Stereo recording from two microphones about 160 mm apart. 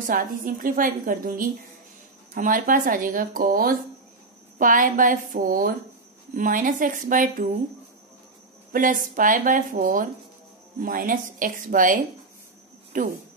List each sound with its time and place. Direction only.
0.0 s a woman's voice: 60° right (ahead or behind)
8.7 s a woman's voice: 55° right (ahead or behind)